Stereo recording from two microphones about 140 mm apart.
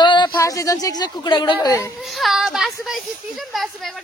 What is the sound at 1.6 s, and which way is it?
Speech, 20° left (ahead or behind).